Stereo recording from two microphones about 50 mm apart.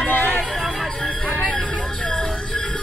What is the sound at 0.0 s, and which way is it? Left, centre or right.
Music, left.